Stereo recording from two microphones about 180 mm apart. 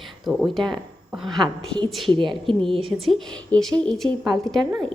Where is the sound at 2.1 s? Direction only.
25° right (ahead or behind).